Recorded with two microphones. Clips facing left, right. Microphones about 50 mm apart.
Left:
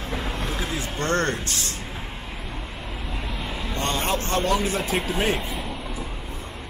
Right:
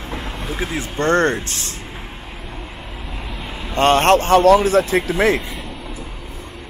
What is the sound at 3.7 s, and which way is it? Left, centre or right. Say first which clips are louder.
A man's voice: right 13 dB; right.